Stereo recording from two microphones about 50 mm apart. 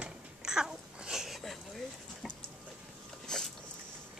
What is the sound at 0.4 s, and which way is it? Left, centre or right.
Babbling, centre.